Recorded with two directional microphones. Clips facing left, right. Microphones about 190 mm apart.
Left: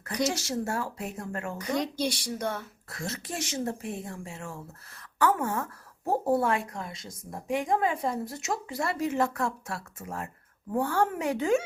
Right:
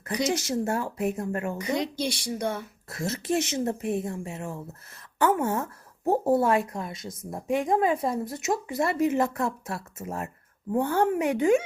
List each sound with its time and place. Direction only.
0.0 s a woman's voice: 20° right (ahead or behind)
2.0 s speech: 10° left (ahead or behind)
2.2 s a woman's voice: 10° right (ahead or behind)